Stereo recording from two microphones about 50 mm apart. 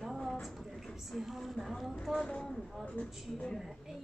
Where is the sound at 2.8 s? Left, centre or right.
Left.